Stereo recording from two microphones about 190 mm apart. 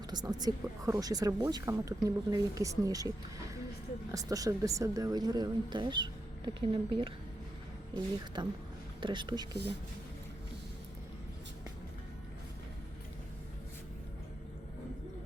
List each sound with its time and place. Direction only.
0.1 s speech: 20° right (ahead or behind)
8.4 s speech: 25° right (ahead or behind)